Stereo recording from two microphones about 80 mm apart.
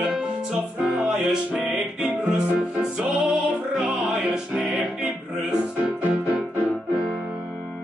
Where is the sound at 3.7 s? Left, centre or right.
Centre.